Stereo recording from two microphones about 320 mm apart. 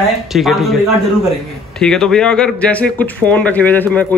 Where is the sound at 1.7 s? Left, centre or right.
Centre.